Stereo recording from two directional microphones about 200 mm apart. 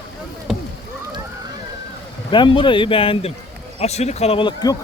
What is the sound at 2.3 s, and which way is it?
A man's voice, 25° left (ahead or behind).